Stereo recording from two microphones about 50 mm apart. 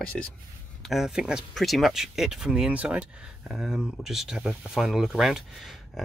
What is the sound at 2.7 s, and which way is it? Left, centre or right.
Speech, right.